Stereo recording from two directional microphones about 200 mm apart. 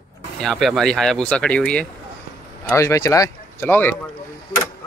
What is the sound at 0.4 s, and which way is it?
Speech, centre (ahead or behind).